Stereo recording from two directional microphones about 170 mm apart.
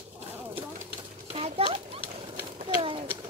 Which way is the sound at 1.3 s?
35° right (ahead or behind).